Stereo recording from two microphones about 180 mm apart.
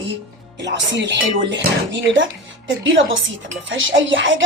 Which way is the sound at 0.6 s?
85° right.